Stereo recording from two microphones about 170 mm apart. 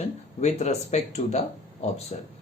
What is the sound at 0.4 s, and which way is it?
Speech, 40° left (ahead or behind).